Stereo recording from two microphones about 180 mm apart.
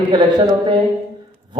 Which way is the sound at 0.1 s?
25° right (ahead or behind).